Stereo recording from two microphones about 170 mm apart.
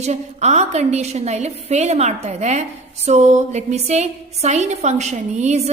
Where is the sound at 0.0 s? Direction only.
40° right (ahead or behind).